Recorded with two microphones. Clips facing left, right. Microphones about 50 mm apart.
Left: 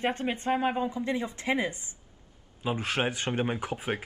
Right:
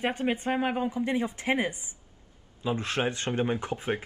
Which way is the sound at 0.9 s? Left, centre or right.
Right.